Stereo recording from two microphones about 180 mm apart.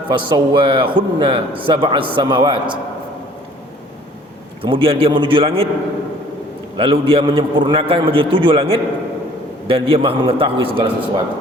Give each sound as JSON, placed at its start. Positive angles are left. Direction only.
{"t": 0.1, "sound": "a man's voice", "side_deg": -25}
{"t": 4.6, "sound": "a man's voice", "side_deg": -30}
{"t": 6.7, "sound": "a man's voice", "side_deg": -30}